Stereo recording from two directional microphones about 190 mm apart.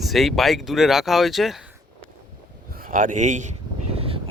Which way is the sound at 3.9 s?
30° right (ahead or behind).